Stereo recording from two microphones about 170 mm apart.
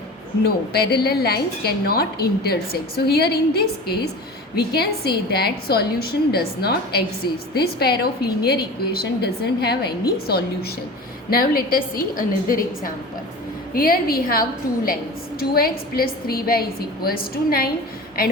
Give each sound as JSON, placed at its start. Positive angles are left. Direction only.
{"t": 0.4, "sound": "a woman's voice", "side_deg": 65}